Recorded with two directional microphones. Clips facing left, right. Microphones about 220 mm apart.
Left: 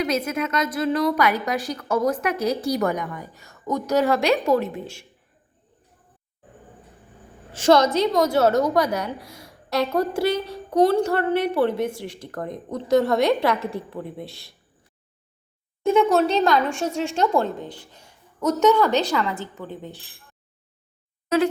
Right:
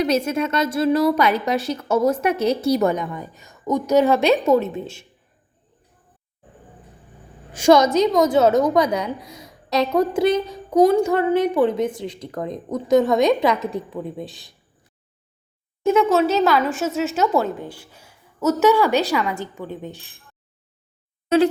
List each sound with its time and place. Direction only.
0.0 s a woman's voice: 30° right (ahead or behind)
7.5 s a woman's voice: 15° right (ahead or behind)
15.8 s speech: centre (ahead or behind)
21.3 s a woman's voice: 25° right (ahead or behind)